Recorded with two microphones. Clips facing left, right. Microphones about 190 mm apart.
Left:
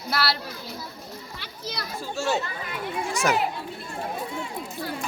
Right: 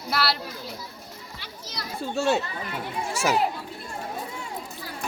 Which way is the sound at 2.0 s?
60° right (ahead or behind).